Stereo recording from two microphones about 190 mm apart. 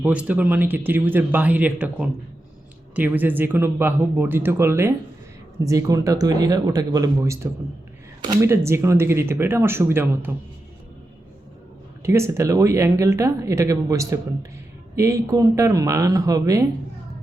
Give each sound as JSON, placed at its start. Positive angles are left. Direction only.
{"t": 0.0, "sound": "speech", "side_deg": -5}
{"t": 12.0, "sound": "speech", "side_deg": -15}